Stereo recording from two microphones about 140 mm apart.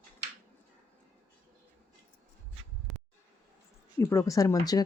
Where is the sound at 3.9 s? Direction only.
25° left (ahead or behind).